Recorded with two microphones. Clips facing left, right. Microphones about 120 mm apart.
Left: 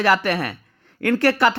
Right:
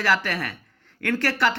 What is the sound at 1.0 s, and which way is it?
Speech, 35° left (ahead or behind).